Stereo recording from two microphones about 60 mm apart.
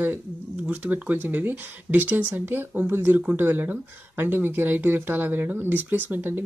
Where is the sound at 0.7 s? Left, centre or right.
Right.